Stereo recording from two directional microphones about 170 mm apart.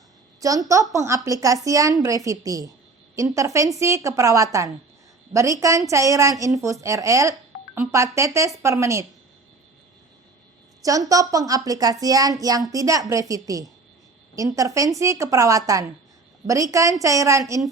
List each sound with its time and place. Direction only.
0.3 s a woman's voice: 20° right (ahead or behind)
10.8 s a child's voice: 20° right (ahead or behind)